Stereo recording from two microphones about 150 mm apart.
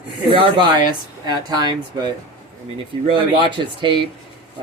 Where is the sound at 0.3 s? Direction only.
35° right (ahead or behind).